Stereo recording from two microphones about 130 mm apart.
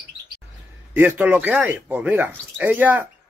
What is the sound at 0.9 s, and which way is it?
Speech, 15° right (ahead or behind).